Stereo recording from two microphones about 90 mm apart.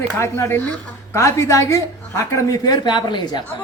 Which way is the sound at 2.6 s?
50° left (ahead or behind).